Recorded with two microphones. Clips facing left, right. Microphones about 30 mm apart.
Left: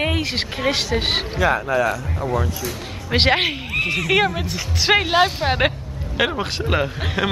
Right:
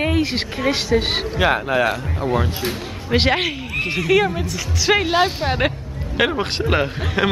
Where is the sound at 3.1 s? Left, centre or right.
Centre.